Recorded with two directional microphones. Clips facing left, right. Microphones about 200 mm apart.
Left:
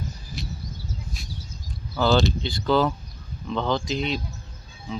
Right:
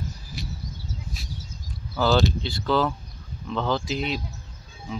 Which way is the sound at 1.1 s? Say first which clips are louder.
Even; 5° right (ahead or behind).